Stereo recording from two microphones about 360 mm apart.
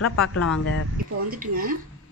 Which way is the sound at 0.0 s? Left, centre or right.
Left.